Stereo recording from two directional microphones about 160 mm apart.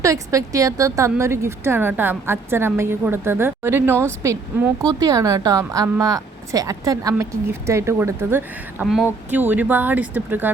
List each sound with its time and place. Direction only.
0.0 s a woman's voice: 20° right (ahead or behind)